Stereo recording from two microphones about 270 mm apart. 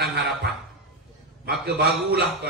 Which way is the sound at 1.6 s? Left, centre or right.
Right.